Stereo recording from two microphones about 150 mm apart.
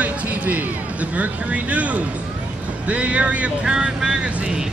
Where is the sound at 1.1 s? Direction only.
10° right (ahead or behind).